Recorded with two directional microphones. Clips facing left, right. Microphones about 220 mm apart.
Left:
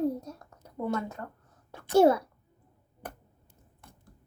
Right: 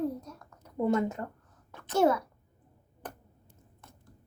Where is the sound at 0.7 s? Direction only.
20° right (ahead or behind).